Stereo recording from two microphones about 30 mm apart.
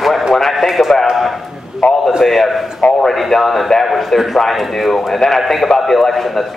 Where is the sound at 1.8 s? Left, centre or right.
Left.